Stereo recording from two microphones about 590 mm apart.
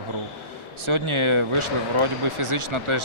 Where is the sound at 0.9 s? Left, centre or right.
Right.